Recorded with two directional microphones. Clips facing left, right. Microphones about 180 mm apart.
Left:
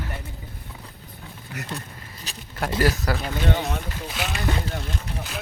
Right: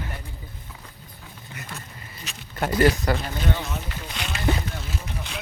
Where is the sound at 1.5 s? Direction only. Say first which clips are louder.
Left 6 dB; 70° left (ahead or behind).